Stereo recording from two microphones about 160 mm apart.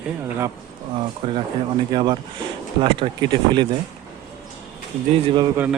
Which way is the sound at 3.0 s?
40° right (ahead or behind).